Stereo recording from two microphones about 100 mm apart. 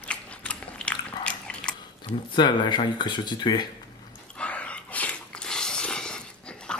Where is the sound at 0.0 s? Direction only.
10° left (ahead or behind).